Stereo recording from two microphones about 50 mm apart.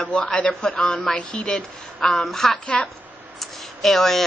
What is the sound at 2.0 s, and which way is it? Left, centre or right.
Speech, centre.